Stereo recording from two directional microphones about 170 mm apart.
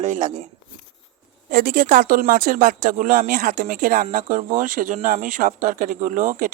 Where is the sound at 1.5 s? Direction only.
60° right (ahead or behind).